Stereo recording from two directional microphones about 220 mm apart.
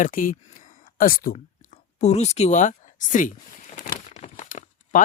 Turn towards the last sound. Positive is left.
turn(degrees=35)  # may be behind; listen again after turning